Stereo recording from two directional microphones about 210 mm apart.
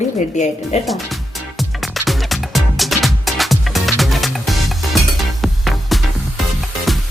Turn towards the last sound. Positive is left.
turn(degrees=0)  # may be behind; listen again after turning